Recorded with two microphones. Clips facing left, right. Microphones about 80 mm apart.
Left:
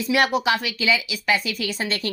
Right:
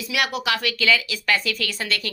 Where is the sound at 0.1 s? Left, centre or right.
Left.